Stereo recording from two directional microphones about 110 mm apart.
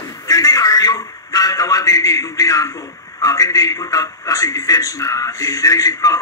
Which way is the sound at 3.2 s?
30° left (ahead or behind).